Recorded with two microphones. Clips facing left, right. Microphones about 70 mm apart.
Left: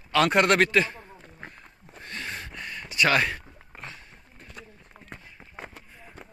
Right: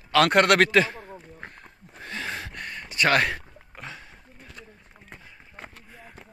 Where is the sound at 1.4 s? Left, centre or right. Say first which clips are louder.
Right 1 dB; right.